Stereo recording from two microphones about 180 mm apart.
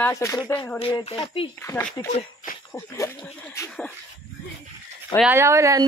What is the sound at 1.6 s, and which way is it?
A woman's voice, 15° left (ahead or behind).